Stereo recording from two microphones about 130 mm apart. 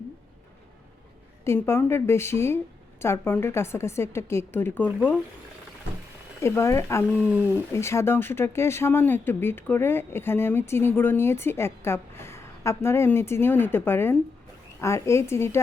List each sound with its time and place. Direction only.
1.6 s speech: 20° left (ahead or behind)
6.4 s speech: 20° left (ahead or behind)